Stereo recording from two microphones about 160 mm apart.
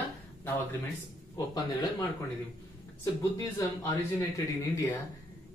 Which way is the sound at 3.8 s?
20° left (ahead or behind).